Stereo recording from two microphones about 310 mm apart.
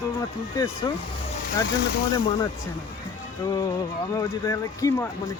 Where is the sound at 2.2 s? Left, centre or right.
Centre.